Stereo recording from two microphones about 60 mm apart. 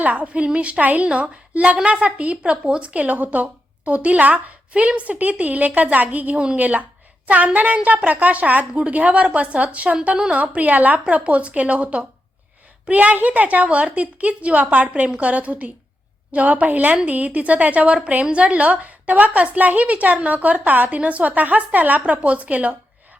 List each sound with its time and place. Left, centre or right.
0.0 s a woman's voice: right